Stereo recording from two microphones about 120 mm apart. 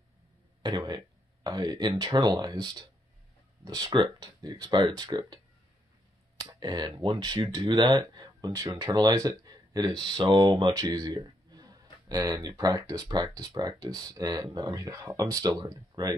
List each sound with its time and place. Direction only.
0.6 s speech: 40° right (ahead or behind)
6.4 s speech: 35° right (ahead or behind)
10.3 s a sound: 35° right (ahead or behind)
12.3 s speech: 30° right (ahead or behind)